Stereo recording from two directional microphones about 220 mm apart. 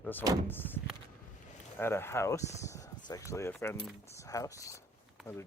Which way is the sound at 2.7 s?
15° left (ahead or behind).